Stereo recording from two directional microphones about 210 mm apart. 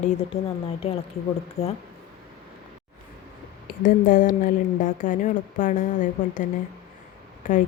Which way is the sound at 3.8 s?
40° left (ahead or behind).